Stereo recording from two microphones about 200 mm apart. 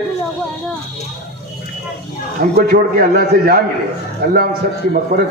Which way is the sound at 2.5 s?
45° right (ahead or behind).